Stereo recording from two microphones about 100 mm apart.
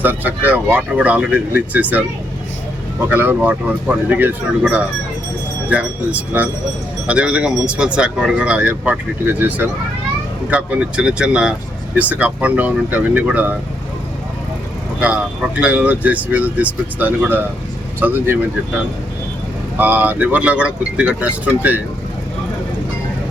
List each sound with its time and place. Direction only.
0.0 s speech: 20° right (ahead or behind)
3.1 s speech: 20° right (ahead or behind)
15.0 s speech: 15° right (ahead or behind)
19.7 s speech: 15° right (ahead or behind)